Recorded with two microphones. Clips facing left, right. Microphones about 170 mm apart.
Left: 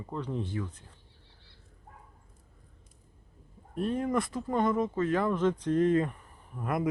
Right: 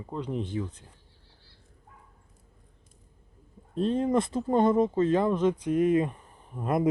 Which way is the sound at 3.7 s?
25° right (ahead or behind).